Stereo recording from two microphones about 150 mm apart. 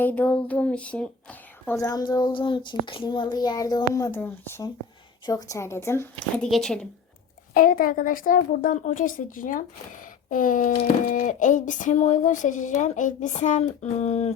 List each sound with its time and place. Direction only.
0.0 s speech: 10° left (ahead or behind)
1.8 s child singing: 25° left (ahead or behind)
4.2 s speech: 15° left (ahead or behind)
5.2 s child singing: 25° left (ahead or behind)
6.5 s speech: centre (ahead or behind)
7.5 s speech: 70° left (ahead or behind); by 14.3 s 45° left (ahead or behind)